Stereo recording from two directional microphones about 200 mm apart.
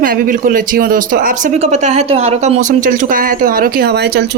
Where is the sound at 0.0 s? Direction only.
45° right (ahead or behind).